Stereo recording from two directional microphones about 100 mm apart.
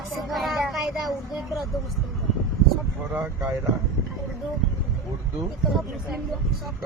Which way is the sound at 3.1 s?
15° right (ahead or behind).